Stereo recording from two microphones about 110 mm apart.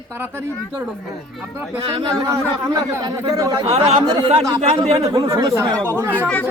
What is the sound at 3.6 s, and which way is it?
Speech, 65° right (ahead or behind).